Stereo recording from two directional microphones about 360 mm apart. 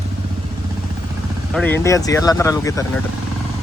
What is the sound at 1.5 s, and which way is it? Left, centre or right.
Speech, centre.